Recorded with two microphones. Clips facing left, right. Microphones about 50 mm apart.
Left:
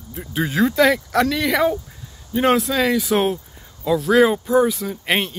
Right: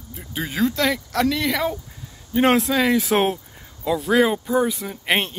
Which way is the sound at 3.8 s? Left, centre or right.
Centre.